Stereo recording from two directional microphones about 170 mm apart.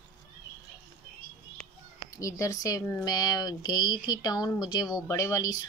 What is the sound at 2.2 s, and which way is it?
Speech, 20° left (ahead or behind).